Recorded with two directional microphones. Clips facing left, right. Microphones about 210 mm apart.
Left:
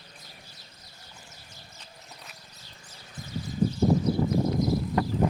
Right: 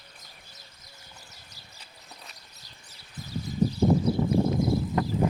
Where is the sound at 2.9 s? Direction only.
40° right (ahead or behind).